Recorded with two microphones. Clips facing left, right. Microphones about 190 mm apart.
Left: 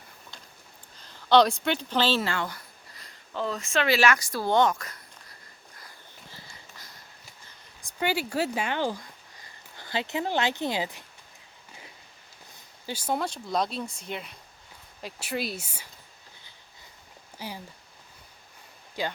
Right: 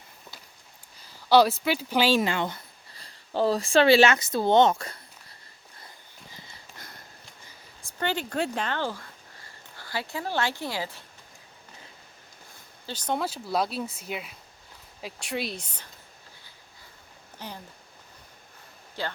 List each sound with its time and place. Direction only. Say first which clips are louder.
0.9 s speech: right 1 dB; 10° right (ahead or behind); by 4.9 s 25° right (ahead or behind)
7.8 s a woman's voice: left 1 dB; 15° left (ahead or behind)
12.8 s speech: even; 10° left (ahead or behind)
13.1 s speech: right 1 dB; 5° right (ahead or behind)
17.3 s speech: left 2 dB; 10° left (ahead or behind)
19.0 s a woman's voice: left 2 dB; 15° left (ahead or behind)